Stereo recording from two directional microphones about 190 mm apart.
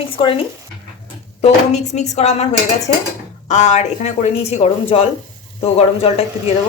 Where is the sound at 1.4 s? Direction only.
35° left (ahead or behind).